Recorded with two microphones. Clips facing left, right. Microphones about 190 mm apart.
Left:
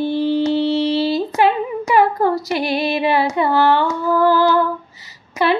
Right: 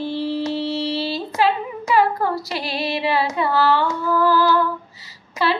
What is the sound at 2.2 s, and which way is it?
Female singing, 20° left (ahead or behind).